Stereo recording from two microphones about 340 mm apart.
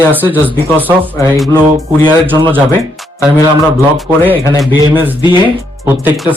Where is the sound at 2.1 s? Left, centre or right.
Centre.